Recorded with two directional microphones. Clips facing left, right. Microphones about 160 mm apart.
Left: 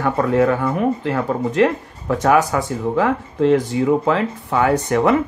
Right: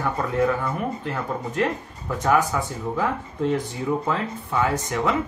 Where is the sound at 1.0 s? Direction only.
90° left; by 5.1 s 60° left (ahead or behind).